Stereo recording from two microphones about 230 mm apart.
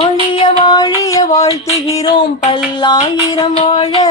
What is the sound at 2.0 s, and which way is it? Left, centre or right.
Music, left.